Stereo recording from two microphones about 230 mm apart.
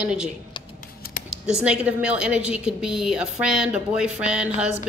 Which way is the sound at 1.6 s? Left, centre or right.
Centre.